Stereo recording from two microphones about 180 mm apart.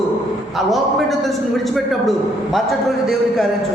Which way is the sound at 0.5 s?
Centre (ahead or behind).